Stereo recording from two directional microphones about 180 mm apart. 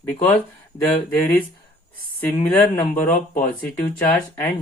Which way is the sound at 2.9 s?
45° left (ahead or behind).